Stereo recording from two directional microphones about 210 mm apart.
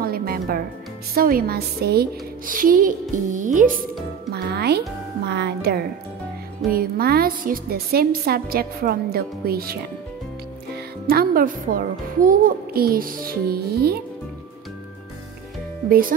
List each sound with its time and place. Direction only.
0.0 s music: 45° right (ahead or behind)
1.1 s speech: 45° right (ahead or behind)
4.3 s a woman's voice: 50° right (ahead or behind)
11.1 s a woman's voice: 45° right (ahead or behind)
15.9 s a woman's voice: 45° right (ahead or behind)